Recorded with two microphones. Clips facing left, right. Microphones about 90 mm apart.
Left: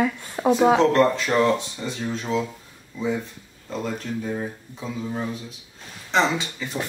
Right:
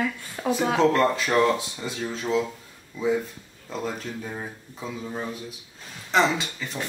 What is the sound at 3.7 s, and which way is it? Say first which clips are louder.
A man's voice: left 2 dB; 5° right (ahead or behind).